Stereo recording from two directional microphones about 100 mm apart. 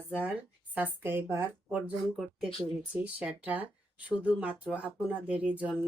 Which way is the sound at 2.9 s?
15° right (ahead or behind).